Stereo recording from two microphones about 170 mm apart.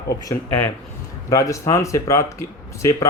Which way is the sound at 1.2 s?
20° left (ahead or behind).